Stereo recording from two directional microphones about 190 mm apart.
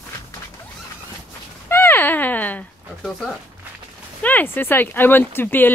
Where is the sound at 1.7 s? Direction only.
10° left (ahead or behind).